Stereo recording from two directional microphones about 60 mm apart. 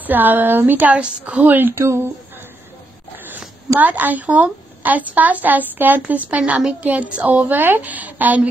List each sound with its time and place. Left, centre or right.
0.0 s speech: right
1.4 s speech: right
1.8 s speech: right
3.3 s a woman's voice: right